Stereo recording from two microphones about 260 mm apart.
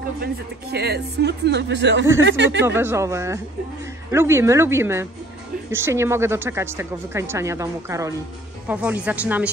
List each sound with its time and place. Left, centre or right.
0.2 s speech: right
2.6 s speech: centre